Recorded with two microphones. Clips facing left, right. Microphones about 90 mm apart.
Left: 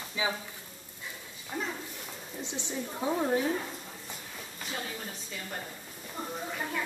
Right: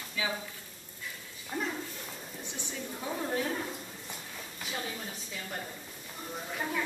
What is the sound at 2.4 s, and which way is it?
A woman's voice, 20° left (ahead or behind).